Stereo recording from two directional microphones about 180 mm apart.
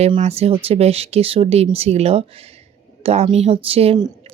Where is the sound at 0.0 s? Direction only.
35° right (ahead or behind).